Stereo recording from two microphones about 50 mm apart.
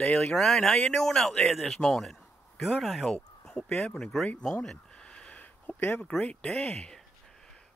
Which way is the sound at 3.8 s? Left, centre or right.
Centre.